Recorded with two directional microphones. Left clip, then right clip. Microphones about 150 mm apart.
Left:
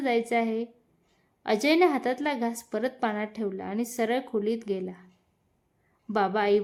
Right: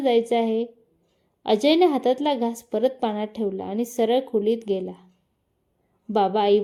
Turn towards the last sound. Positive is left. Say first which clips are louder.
# right 5 dB
turn(degrees=-10)  # may be behind; listen again after turning